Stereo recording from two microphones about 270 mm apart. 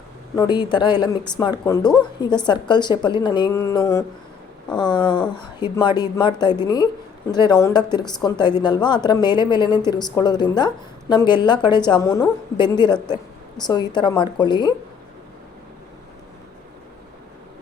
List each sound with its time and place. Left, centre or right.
0.3 s a woman's voice: centre